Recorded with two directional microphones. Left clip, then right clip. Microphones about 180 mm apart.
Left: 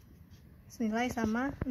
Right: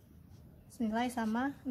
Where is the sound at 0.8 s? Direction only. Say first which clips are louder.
Left 2 dB; 15° left (ahead or behind).